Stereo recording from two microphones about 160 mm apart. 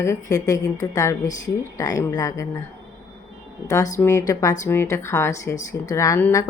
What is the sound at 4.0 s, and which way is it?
Speech, 15° left (ahead or behind).